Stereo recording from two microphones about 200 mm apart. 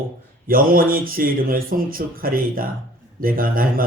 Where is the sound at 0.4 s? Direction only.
45° right (ahead or behind).